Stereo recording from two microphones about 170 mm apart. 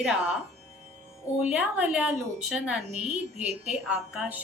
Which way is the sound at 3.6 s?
5° right (ahead or behind).